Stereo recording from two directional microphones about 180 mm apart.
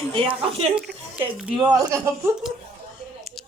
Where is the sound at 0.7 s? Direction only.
5° right (ahead or behind).